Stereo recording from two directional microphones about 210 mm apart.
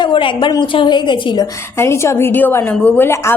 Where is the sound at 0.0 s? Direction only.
25° left (ahead or behind).